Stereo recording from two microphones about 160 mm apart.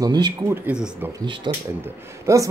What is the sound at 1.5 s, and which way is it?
Speech, 25° right (ahead or behind).